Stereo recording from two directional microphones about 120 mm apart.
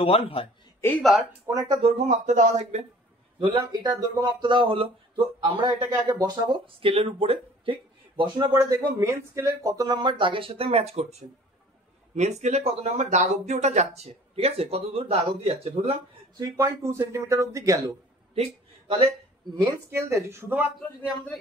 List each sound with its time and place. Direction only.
0.0 s a man's voice: 50° left (ahead or behind)
0.7 s speech: 15° left (ahead or behind)
1.5 s speech: 30° right (ahead or behind)
2.0 s speech: 80° right
3.3 s speech: 40° right (ahead or behind)
8.5 s speech: 25° right (ahead or behind); by 16.0 s 55° right (ahead or behind)
16.3 s speech: 25° right (ahead or behind)
18.3 s a sound: 55° right (ahead or behind)
19.6 s speech: 20° right (ahead or behind)